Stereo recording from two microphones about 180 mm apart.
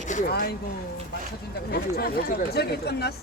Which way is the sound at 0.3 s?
60° left (ahead or behind).